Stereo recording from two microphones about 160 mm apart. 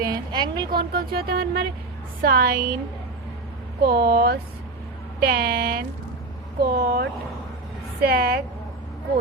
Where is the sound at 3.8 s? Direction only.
75° right (ahead or behind).